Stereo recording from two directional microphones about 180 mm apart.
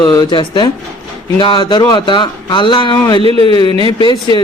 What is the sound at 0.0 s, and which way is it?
Speech, 25° left (ahead or behind).